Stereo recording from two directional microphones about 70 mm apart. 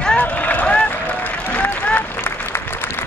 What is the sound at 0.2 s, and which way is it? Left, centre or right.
Run, left.